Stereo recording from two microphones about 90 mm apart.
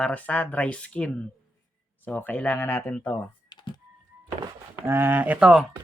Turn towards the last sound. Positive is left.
turn(degrees=-20)  # may be behind; listen again after turning